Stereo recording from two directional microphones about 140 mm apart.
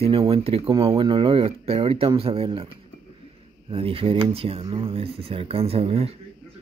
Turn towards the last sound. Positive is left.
turn(degrees=-45)  # may be behind; listen again after turning